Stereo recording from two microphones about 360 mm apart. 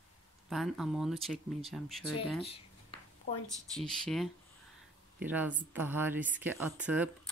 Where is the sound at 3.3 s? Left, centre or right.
Left.